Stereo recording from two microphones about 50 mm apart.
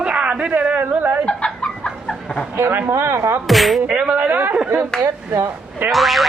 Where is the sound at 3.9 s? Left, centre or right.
Right.